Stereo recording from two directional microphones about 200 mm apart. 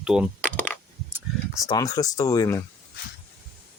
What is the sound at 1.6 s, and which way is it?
Speech, 20° left (ahead or behind).